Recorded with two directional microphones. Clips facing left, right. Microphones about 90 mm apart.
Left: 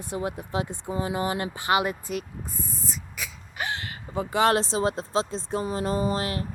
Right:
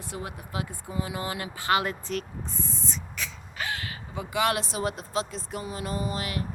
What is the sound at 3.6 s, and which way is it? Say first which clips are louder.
A woman's voice: left 2 dB; 25° left (ahead or behind).